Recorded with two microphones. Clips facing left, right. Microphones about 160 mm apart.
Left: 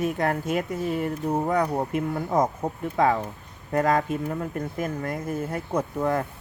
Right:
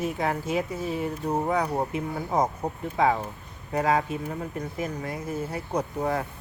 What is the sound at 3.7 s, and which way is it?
Speech, 50° left (ahead or behind).